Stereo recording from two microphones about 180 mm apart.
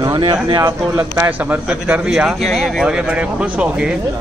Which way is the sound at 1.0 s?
10° right (ahead or behind).